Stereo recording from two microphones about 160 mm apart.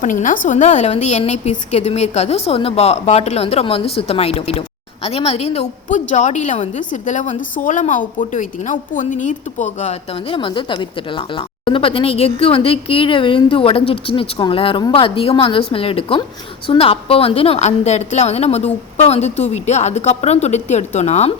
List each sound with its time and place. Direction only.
0.0 s a woman's voice: 55° left (ahead or behind)